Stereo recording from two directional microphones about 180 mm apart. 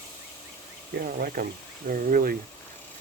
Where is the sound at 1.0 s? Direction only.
50° right (ahead or behind).